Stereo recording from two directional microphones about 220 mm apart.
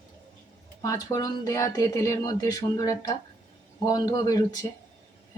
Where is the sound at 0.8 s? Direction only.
15° left (ahead or behind).